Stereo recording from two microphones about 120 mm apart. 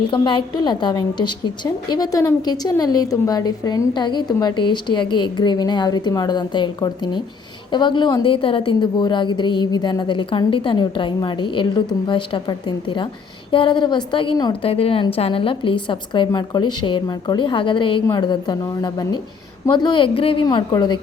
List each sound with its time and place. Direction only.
0.1 s a woman's voice: 40° left (ahead or behind)